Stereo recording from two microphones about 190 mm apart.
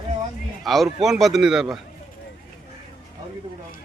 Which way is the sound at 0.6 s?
Centre (ahead or behind).